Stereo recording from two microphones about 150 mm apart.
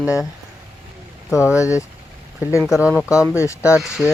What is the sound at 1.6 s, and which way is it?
Speech, 20° left (ahead or behind).